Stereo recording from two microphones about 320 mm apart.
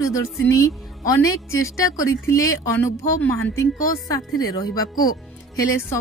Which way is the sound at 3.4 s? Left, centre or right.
Left.